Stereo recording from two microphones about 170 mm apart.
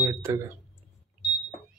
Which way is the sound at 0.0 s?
15° right (ahead or behind).